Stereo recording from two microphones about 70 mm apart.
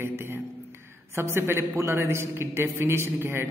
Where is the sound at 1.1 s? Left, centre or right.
Right.